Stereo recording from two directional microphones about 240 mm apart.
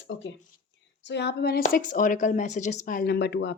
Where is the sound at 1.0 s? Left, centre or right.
Left.